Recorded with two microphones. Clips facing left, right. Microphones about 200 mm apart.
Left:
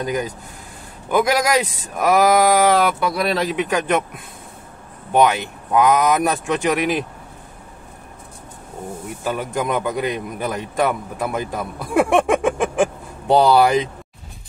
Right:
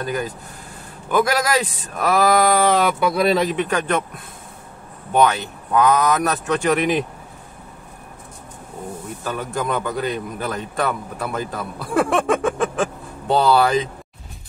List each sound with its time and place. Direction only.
0.0 s a man's voice: 15° left (ahead or behind)
5.1 s a man's voice: 15° left (ahead or behind)
9.2 s a man's voice: 15° left (ahead or behind)